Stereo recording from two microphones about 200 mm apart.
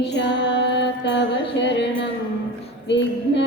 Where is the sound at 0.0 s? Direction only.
60° left (ahead or behind).